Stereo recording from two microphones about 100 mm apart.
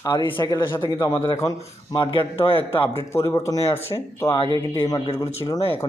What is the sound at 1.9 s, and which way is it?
Speech, 50° left (ahead or behind).